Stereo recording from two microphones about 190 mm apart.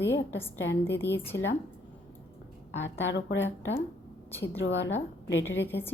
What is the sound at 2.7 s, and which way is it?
A woman's voice, 75° left (ahead or behind).